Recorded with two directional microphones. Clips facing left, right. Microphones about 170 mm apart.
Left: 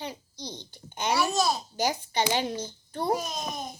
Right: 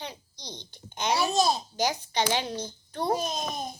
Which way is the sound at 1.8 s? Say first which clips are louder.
Even; 10° left (ahead or behind).